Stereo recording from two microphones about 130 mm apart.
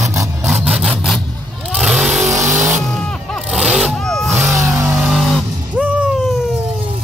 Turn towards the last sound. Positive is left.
turn(degrees=0)  # may be behind; listen again after turning